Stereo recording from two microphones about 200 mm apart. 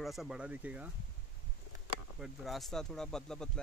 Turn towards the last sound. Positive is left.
turn(degrees=5)  # may be behind; listen again after turning